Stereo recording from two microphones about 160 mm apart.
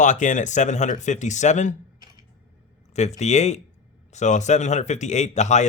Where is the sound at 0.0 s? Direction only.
50° left (ahead or behind).